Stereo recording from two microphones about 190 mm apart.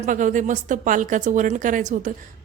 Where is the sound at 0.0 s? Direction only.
40° right (ahead or behind).